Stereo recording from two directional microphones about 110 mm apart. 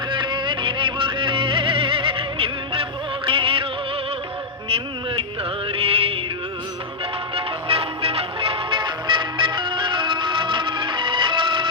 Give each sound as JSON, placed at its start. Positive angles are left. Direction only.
{"t": 0.1, "sound": "music", "side_deg": -45}
{"t": 5.6, "sound": "music", "side_deg": -60}
{"t": 7.3, "sound": "music", "side_deg": -60}